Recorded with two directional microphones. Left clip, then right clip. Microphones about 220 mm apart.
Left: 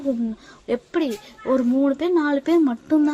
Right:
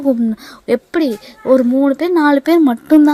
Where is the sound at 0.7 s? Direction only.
40° right (ahead or behind).